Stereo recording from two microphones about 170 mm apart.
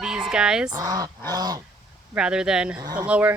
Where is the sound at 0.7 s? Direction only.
20° right (ahead or behind).